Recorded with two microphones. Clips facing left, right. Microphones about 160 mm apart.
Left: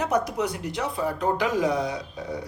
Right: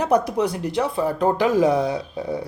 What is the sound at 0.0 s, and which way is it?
Speech, 35° right (ahead or behind).